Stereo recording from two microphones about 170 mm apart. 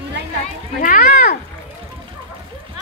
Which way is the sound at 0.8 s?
60° left (ahead or behind).